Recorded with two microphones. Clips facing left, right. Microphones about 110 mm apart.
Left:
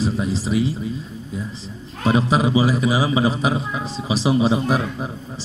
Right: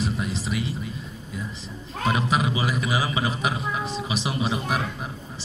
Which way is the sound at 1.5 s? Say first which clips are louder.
Left 2 dB; 35° left (ahead or behind).